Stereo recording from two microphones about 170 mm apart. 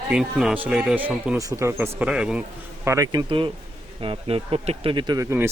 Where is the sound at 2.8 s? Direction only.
20° right (ahead or behind).